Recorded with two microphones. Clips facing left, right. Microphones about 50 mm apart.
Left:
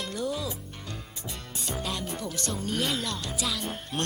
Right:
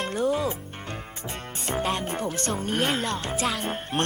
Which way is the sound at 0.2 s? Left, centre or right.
Right.